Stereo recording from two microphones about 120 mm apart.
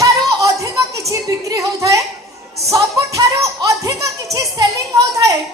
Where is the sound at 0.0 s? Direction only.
30° right (ahead or behind).